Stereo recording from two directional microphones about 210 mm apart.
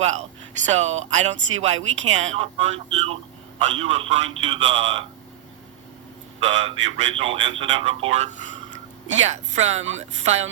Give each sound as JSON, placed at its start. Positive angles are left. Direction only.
{"t": 0.0, "sound": "a man's voice", "side_deg": -35}
{"t": 6.4, "sound": "a man's voice", "side_deg": -30}